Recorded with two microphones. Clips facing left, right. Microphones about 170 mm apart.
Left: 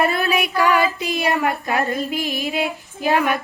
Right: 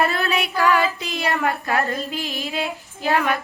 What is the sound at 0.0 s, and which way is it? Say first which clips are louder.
Speech: left 2 dB; 15° left (ahead or behind).